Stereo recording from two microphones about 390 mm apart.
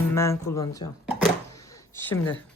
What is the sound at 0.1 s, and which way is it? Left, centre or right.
Speech, centre.